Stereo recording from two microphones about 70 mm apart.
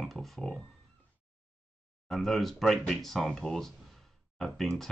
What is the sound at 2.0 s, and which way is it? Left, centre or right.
Speech, centre.